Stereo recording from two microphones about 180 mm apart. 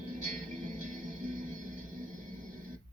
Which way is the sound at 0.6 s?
50° right (ahead or behind).